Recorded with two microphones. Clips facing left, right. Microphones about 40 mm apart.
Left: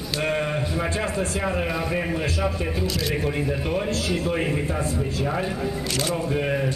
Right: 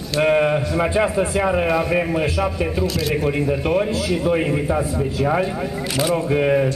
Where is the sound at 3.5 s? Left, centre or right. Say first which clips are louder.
Right 6 dB; centre.